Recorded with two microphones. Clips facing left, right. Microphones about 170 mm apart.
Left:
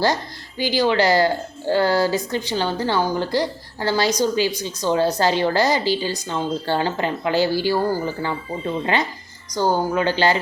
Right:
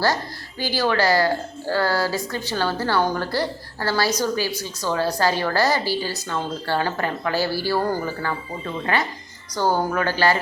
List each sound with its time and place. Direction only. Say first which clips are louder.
0.6 s a woman's voice: left 3 dB; 15° left (ahead or behind)